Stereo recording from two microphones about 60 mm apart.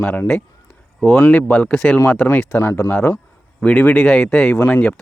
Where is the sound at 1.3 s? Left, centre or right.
Left.